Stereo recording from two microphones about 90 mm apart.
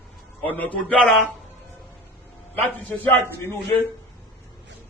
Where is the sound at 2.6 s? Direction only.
20° left (ahead or behind).